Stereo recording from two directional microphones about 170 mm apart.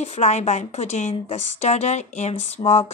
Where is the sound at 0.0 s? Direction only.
40° left (ahead or behind).